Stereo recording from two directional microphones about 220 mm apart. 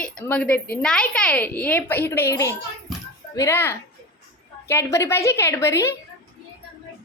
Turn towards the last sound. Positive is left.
turn(degrees=10)  # may be behind; listen again after turning